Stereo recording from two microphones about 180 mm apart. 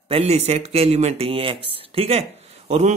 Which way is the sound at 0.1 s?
35° right (ahead or behind).